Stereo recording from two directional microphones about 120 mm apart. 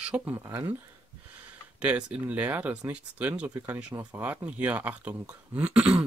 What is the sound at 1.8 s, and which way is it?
Speech, 10° right (ahead or behind).